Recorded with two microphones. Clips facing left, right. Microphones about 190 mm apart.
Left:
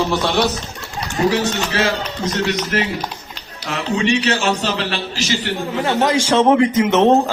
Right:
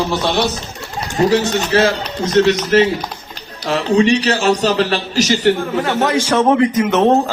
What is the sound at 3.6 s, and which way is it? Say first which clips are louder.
A man's voice: right 6 dB; 35° right (ahead or behind).